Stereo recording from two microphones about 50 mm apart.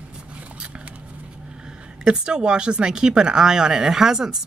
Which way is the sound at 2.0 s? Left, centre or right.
Centre.